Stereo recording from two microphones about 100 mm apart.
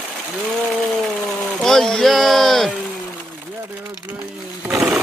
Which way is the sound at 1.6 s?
5° left (ahead or behind).